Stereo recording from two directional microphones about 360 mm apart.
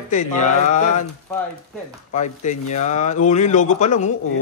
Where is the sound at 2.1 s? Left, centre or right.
Centre.